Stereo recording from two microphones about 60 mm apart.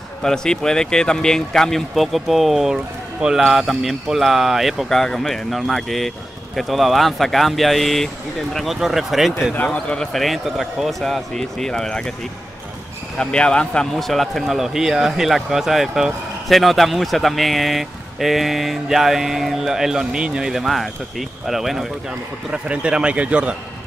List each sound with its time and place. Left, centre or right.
0.2 s speech: centre
3.4 s a man's voice: centre
9.7 s speech: centre
10.2 s a man's voice: centre
13.2 s a man's voice: centre
22.5 s a man's voice: centre